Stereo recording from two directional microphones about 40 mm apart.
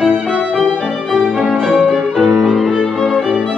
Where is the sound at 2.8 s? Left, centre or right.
Centre.